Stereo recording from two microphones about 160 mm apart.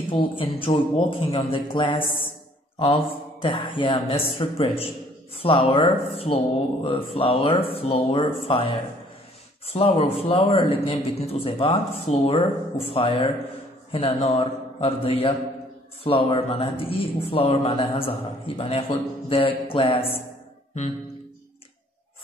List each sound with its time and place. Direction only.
0.1 s a man's voice: 30° left (ahead or behind)
3.4 s a man's voice: 30° left (ahead or behind)